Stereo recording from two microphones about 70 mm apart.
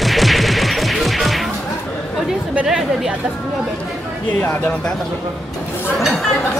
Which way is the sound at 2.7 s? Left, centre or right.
Centre.